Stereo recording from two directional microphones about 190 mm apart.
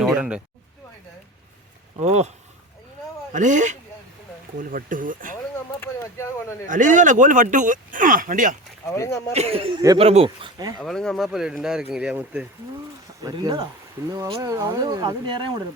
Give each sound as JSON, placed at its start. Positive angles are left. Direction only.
{"t": 0.0, "sound": "a sound", "side_deg": -5}
{"t": 2.0, "sound": "speech", "side_deg": -35}
{"t": 3.3, "sound": "speech", "side_deg": -40}
{"t": 5.8, "sound": "a sound", "side_deg": 15}
{"t": 6.7, "sound": "speech", "side_deg": -40}
{"t": 9.0, "sound": "speech", "side_deg": 15}
{"t": 9.3, "sound": "speech", "side_deg": -30}
{"t": 10.8, "sound": "speech", "side_deg": 5}
{"t": 13.2, "sound": "speech", "side_deg": -20}